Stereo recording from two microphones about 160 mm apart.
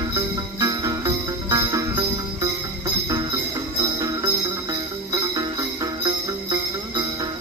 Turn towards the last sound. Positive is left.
turn(degrees=-25)  # may be behind; listen again after turning